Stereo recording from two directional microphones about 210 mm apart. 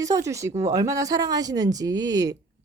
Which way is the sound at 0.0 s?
15° right (ahead or behind).